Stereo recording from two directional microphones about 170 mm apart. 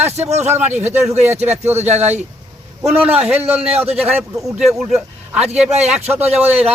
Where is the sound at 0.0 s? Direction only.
40° right (ahead or behind).